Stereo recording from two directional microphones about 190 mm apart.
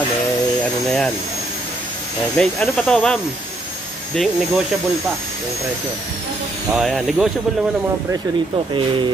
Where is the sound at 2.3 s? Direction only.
5° left (ahead or behind).